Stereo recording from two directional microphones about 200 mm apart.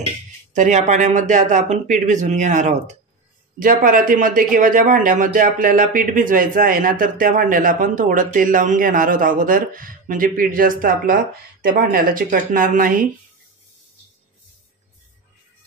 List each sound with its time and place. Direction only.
0.5 s speech: 35° right (ahead or behind)